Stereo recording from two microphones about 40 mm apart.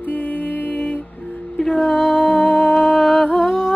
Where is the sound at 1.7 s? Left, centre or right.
Centre.